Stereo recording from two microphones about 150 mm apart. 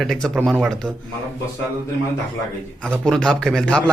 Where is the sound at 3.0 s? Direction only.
5° left (ahead or behind).